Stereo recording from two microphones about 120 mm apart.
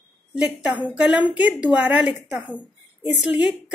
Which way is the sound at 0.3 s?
5° right (ahead or behind).